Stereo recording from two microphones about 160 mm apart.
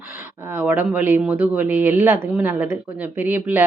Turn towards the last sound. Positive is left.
turn(degrees=-15)  # may be behind; listen again after turning